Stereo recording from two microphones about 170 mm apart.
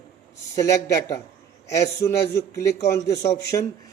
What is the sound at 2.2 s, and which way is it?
Speech, 15° left (ahead or behind).